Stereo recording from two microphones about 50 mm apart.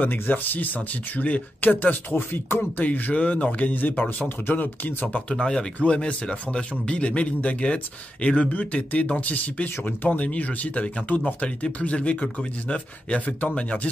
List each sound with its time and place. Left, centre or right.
0.0 s speech: left
2.8 s speech: left
5.3 s speech: centre
5.8 s speech: left